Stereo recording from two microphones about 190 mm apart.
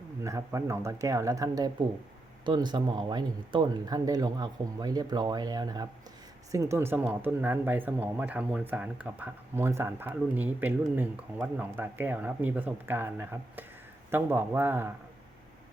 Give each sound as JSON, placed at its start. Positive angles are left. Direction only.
{"t": 0.2, "sound": "speech", "side_deg": -15}